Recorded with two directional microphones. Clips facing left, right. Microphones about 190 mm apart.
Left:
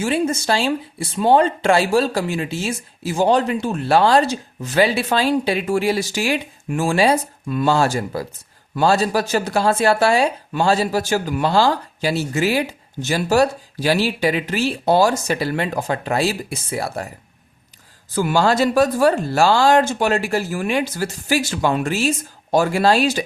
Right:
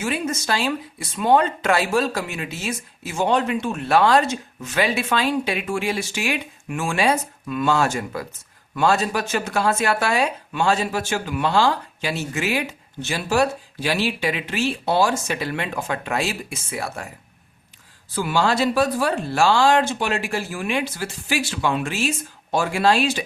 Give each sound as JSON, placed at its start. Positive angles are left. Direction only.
{"t": 0.0, "sound": "speech", "side_deg": 30}
{"t": 18.1, "sound": "speech", "side_deg": 45}